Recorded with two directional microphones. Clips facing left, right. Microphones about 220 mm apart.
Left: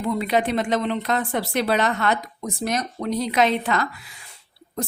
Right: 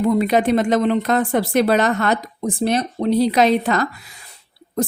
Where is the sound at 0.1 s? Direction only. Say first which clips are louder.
Right 3 dB; 45° right (ahead or behind).